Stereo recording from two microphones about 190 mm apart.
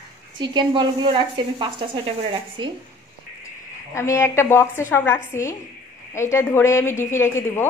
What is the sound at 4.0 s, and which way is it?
Speech, 15° left (ahead or behind).